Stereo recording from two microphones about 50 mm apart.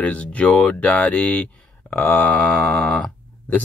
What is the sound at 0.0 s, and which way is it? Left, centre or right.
Speech, left.